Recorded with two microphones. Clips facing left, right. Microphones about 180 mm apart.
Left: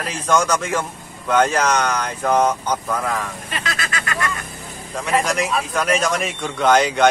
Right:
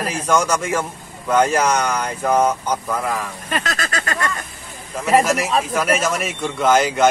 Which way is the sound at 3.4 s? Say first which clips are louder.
Right 3 dB; 45° right (ahead or behind).